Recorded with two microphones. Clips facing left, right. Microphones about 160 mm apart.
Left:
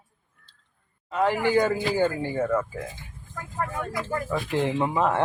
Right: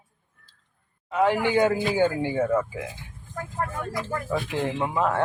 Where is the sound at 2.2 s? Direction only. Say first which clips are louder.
Right 2 dB; 10° right (ahead or behind).